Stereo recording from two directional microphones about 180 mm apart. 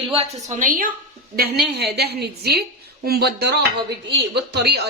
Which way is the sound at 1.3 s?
60° right (ahead or behind).